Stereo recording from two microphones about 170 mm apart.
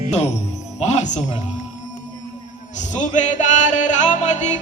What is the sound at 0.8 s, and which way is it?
Music, 45° left (ahead or behind).